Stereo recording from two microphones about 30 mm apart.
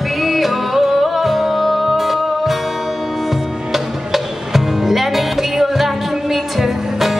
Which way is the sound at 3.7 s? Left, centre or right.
Centre.